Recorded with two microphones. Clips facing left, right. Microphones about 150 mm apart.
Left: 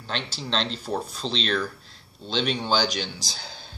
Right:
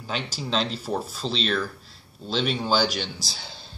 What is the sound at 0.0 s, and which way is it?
Speech, 5° right (ahead or behind).